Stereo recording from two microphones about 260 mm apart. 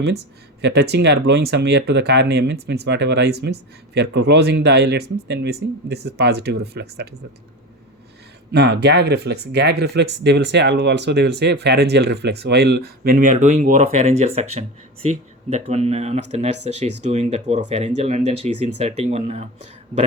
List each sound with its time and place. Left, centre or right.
0.6 s speech: right
8.5 s speech: right